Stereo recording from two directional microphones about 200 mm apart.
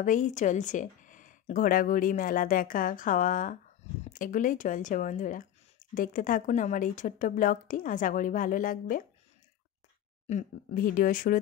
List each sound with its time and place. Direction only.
0.0 s speech: 40° left (ahead or behind)
10.2 s speech: 40° left (ahead or behind)